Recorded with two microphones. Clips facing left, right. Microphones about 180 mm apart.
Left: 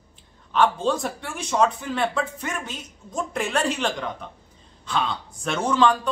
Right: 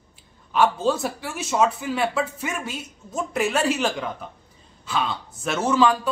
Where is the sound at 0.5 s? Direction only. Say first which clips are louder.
Right 1 dB; 5° right (ahead or behind).